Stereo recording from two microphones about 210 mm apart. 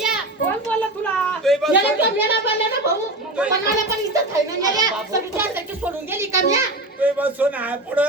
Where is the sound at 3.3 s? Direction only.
5° right (ahead or behind).